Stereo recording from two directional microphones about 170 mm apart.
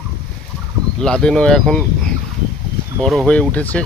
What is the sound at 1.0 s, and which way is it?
Speech, 5° left (ahead or behind).